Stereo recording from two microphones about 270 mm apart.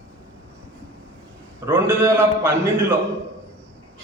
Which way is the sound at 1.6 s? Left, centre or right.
Centre.